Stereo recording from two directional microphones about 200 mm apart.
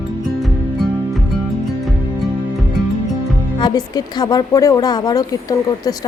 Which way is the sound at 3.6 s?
20° left (ahead or behind).